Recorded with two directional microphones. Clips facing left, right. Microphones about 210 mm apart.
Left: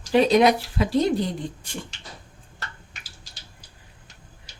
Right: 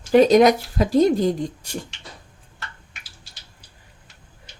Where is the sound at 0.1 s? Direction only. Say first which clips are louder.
Right 4 dB; 45° right (ahead or behind).